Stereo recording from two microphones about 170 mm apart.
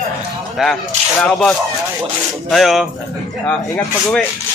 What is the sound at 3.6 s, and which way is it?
Speech, 20° left (ahead or behind).